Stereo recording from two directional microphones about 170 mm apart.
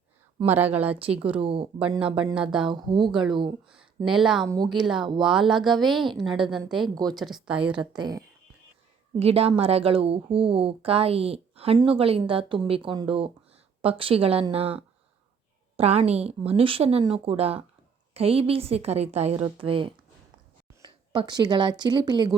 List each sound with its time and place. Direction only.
0.4 s speech: 10° right (ahead or behind)
1.4 s a woman's voice: 35° right (ahead or behind)
1.8 s speech: 5° right (ahead or behind)
2.6 s speech: 25° right (ahead or behind)
3.1 s speech: 5° right (ahead or behind)
4.4 s speech: 25° right (ahead or behind)
4.7 s speech: 5° right (ahead or behind)
7.8 s speech: 25° right (ahead or behind)
9.1 s a woman's voice: 35° right (ahead or behind)